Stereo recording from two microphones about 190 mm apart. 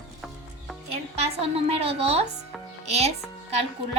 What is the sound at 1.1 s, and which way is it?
A woman's voice, 30° right (ahead or behind).